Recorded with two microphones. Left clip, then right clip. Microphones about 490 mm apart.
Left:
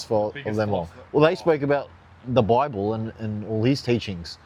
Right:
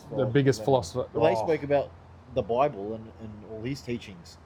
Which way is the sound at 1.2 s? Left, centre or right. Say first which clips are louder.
Left 5 dB; left.